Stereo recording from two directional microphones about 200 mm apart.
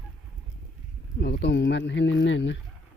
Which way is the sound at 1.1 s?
50° left (ahead or behind).